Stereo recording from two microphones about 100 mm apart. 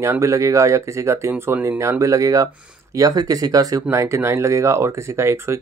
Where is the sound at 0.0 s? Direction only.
30° right (ahead or behind).